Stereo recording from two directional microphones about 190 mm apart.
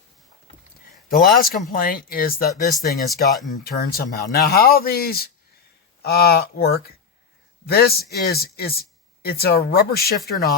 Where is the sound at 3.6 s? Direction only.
55° left (ahead or behind).